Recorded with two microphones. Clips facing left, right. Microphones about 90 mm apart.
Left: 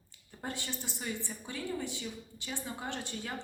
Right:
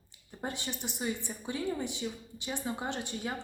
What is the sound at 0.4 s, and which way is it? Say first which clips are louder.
A woman's voice: right 2 dB; 20° right (ahead or behind).